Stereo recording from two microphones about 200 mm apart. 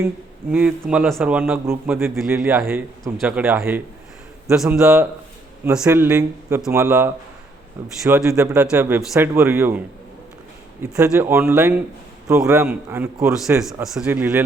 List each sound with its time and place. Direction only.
0.5 s a man's voice: 5° right (ahead or behind)
10.9 s a man's voice: 15° right (ahead or behind)